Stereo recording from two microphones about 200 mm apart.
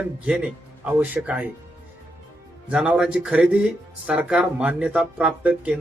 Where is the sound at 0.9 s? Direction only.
10° right (ahead or behind).